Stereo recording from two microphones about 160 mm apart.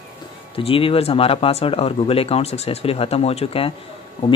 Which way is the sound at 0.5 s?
35° left (ahead or behind).